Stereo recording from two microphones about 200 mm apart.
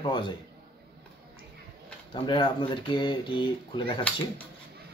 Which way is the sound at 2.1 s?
25° left (ahead or behind).